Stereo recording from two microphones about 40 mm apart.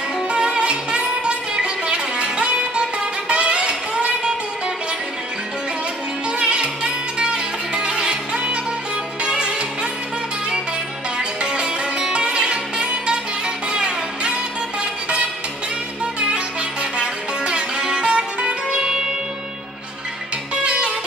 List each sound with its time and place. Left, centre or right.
0.3 s music: right
6.3 s music: right
11.1 s music: centre
16.2 s music: right
20.6 s music: right